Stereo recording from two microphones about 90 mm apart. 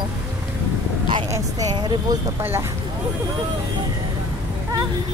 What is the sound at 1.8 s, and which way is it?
Speech, 55° right (ahead or behind).